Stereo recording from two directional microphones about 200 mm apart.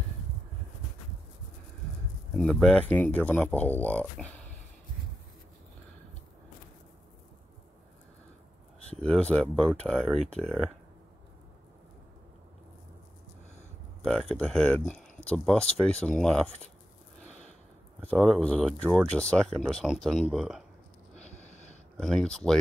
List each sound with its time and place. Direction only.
2.3 s speech: centre (ahead or behind)
9.0 s speech: 5° left (ahead or behind)
14.0 s speech: centre (ahead or behind)
18.1 s speech: centre (ahead or behind)
21.2 s a sound: 35° left (ahead or behind)
21.9 s speech: centre (ahead or behind)